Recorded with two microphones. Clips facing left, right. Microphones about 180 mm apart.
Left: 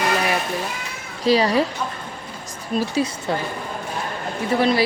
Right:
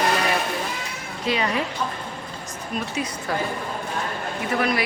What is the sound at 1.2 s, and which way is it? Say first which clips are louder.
Speech: left 7 dB; 35° left (ahead or behind).